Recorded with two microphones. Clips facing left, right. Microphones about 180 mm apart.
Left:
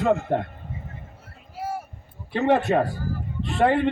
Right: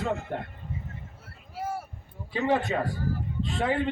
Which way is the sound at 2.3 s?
65° left (ahead or behind).